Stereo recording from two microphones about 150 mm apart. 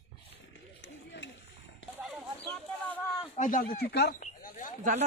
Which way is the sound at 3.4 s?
65° left (ahead or behind).